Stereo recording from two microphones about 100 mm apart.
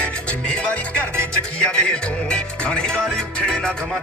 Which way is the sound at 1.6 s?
10° left (ahead or behind).